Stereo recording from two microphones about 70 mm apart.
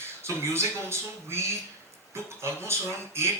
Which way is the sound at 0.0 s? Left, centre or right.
Right.